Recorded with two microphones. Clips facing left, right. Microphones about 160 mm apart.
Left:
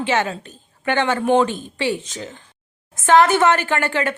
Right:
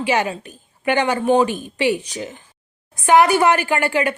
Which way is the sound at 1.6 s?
15° right (ahead or behind).